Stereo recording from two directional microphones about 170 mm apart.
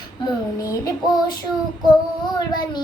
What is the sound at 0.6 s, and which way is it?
Child singing, 20° left (ahead or behind).